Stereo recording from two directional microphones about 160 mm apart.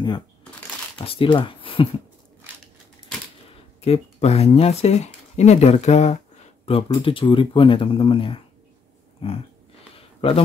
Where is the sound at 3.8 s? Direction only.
40° left (ahead or behind).